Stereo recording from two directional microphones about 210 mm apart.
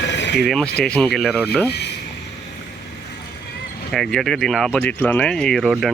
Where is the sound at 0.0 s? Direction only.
55° left (ahead or behind).